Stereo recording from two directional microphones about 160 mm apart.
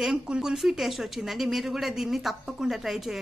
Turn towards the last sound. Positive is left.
turn(degrees=0)  # may be behind; listen again after turning